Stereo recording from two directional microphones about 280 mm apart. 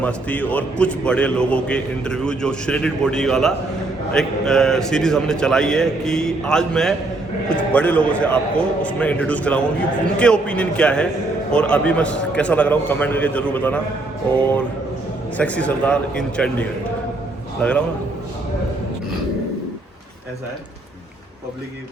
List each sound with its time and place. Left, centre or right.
0.0 s a man's voice: centre
14.3 s music: centre
15.4 s a man's voice: centre